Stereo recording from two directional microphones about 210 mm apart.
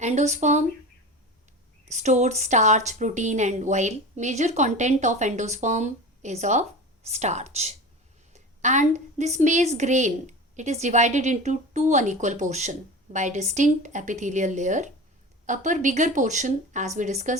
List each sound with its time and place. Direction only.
0.0 s a woman's voice: 35° right (ahead or behind)
1.9 s a woman's voice: 35° right (ahead or behind)